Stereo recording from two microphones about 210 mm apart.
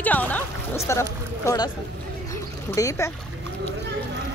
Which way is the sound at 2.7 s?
15° left (ahead or behind).